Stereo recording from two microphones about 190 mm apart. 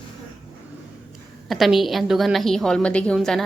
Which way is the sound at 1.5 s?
Centre (ahead or behind).